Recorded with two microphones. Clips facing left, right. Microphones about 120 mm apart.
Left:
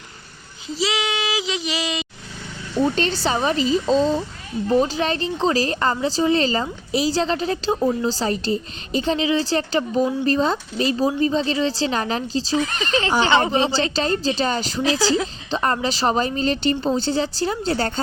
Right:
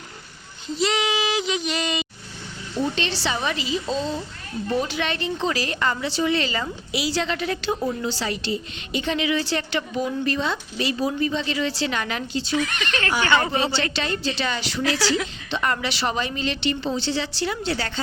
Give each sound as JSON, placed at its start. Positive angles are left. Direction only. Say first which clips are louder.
{"t": 0.7, "sound": "child singing", "louder": "right 1 dB", "side_deg": 0}
{"t": 2.9, "sound": "speech", "louder": "left 5 dB", "side_deg": 40}
{"t": 13.0, "sound": "a woman's voice", "louder": "left 3 dB", "side_deg": 20}
{"t": 13.9, "sound": "speech", "louder": "left 5 dB", "side_deg": 40}
{"t": 14.8, "sound": "a woman's voice", "louder": "left 2 dB", "side_deg": 20}
{"t": 15.0, "sound": "speech", "louder": "left 3 dB", "side_deg": 35}